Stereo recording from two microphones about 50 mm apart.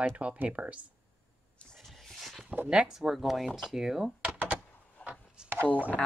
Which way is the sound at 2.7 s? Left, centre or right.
Centre.